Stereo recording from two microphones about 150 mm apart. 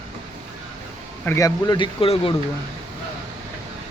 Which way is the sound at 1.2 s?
20° left (ahead or behind).